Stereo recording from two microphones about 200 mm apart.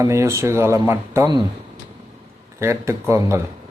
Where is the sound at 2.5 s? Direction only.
15° right (ahead or behind).